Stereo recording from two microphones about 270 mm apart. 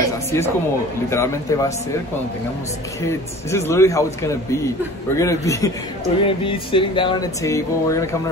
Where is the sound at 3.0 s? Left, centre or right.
Centre.